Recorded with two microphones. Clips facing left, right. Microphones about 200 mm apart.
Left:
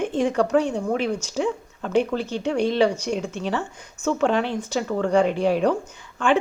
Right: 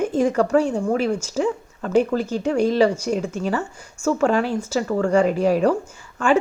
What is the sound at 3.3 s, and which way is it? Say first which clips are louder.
Speech: right 3 dB; 40° right (ahead or behind).